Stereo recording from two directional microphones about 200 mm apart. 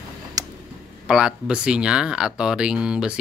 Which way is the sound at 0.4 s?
20° right (ahead or behind).